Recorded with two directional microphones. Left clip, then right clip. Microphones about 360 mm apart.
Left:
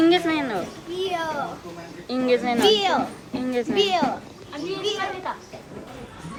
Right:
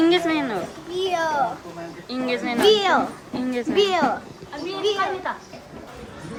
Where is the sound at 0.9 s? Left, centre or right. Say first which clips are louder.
Right 4 dB; right.